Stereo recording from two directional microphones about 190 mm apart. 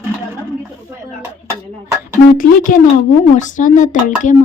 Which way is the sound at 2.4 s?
45° left (ahead or behind).